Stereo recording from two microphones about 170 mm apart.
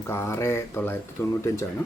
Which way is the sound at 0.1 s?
15° left (ahead or behind).